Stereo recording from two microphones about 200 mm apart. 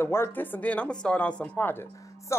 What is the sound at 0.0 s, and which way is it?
Speech, 10° left (ahead or behind).